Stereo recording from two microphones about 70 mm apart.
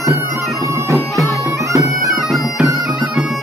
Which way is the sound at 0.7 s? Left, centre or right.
Right.